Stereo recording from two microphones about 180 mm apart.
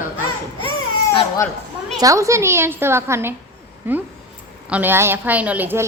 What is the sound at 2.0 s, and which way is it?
A woman's voice, 15° right (ahead or behind).